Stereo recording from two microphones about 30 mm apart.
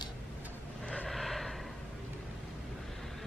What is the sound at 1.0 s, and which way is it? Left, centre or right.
Gasp, centre.